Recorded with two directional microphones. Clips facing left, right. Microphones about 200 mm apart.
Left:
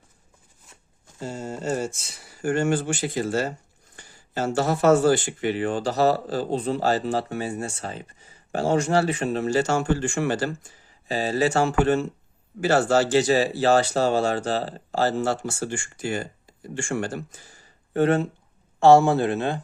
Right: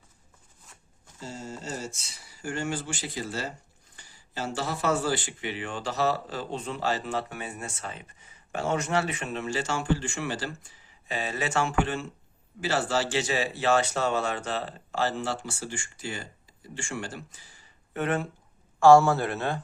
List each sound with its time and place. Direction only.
1.2 s speech: 55° left (ahead or behind)
11.1 s speech: 35° left (ahead or behind); by 19.5 s 20° left (ahead or behind)